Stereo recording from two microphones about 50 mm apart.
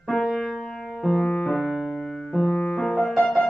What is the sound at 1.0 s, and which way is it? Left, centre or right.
Music, centre.